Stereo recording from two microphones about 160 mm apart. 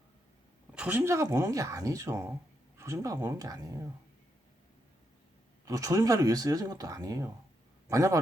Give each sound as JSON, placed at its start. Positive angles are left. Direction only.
{"t": 0.7, "sound": "speech", "side_deg": -10}
{"t": 5.6, "sound": "speech", "side_deg": -20}